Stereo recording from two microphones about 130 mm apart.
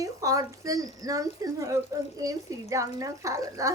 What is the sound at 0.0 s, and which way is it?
Speech, 25° right (ahead or behind).